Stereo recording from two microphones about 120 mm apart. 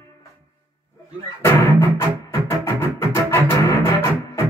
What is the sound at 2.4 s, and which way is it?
Music, 20° left (ahead or behind).